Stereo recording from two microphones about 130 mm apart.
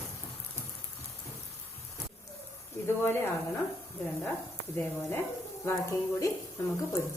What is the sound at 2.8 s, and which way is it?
Speech, 20° left (ahead or behind).